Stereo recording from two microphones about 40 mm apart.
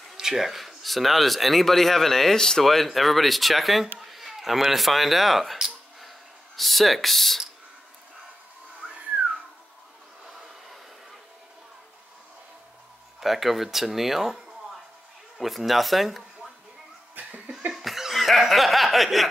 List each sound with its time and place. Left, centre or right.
0.1 s speech: centre
5.9 s a sound: centre
13.2 s speech: centre
17.3 s laughter: right
17.7 s laughter: centre